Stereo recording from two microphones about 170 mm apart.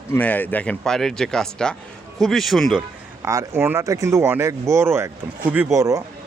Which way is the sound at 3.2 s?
15° right (ahead or behind).